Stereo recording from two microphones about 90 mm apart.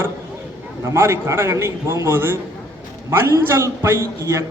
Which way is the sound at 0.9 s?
30° right (ahead or behind).